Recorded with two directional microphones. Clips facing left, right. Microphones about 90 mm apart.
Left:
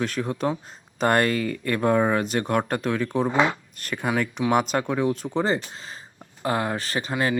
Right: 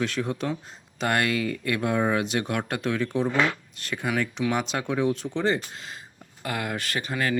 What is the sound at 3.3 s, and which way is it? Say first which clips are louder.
Speech: left 4 dB; 20° left (ahead or behind).